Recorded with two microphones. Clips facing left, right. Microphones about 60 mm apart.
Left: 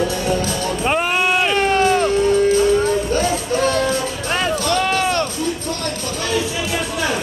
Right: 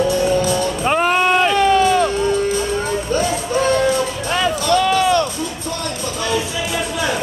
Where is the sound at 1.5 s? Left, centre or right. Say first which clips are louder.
Right 2 dB; left.